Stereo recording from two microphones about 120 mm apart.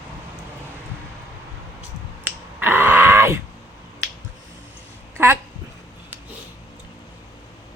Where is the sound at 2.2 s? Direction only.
15° right (ahead or behind).